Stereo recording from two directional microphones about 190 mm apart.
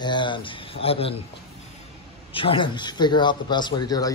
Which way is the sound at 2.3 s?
25° left (ahead or behind).